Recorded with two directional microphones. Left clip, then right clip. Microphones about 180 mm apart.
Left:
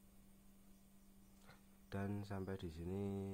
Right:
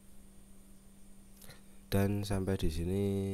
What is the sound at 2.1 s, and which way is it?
Speech, 35° right (ahead or behind).